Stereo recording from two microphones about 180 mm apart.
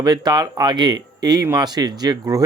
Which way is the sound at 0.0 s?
25° right (ahead or behind).